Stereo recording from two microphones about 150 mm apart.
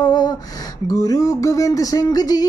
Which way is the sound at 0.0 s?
25° left (ahead or behind).